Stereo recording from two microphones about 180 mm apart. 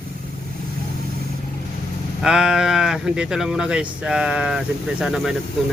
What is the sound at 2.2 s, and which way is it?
Speech, 5° right (ahead or behind).